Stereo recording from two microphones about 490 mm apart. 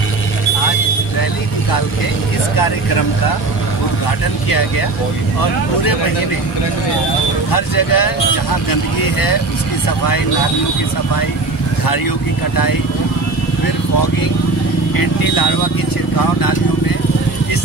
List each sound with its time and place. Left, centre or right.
7.5 s speech: left
15.0 s speech: left